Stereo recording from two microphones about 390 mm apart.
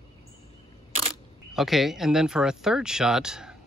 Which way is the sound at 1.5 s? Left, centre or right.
Centre.